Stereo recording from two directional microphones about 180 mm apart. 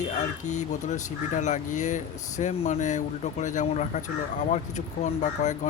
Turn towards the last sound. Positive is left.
turn(degrees=40)  # may be behind; listen again after turning